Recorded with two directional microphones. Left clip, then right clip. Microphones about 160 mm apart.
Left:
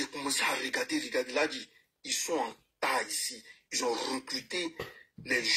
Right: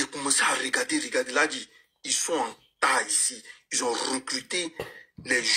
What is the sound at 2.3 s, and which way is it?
Speech, 20° right (ahead or behind).